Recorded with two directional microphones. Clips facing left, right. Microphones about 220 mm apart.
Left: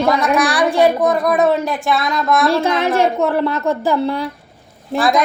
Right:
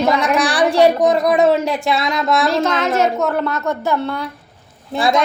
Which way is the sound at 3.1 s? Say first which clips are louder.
Left 2 dB; 5° left (ahead or behind).